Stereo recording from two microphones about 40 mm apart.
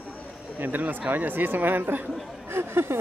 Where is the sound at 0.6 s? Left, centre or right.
Right.